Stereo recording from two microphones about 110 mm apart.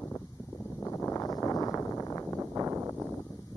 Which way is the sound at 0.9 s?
25° left (ahead or behind).